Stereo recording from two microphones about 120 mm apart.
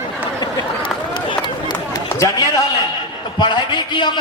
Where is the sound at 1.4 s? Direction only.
40° left (ahead or behind).